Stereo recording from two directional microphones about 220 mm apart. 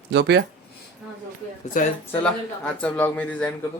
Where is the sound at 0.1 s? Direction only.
50° right (ahead or behind).